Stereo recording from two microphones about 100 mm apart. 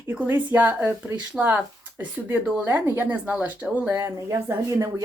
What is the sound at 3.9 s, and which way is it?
A woman's voice, 25° right (ahead or behind).